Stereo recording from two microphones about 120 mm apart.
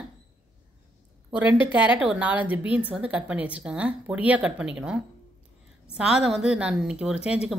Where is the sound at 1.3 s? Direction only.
10° right (ahead or behind).